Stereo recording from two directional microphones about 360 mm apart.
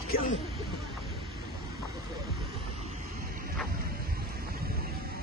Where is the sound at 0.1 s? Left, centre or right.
Left.